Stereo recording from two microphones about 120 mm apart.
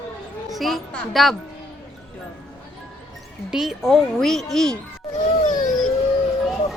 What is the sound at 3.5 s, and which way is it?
Speech, 5° right (ahead or behind).